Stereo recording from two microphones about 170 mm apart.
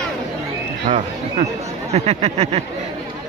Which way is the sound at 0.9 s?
45° right (ahead or behind).